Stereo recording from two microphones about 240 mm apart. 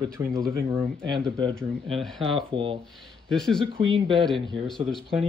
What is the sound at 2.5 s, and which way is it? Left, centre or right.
Speech, right.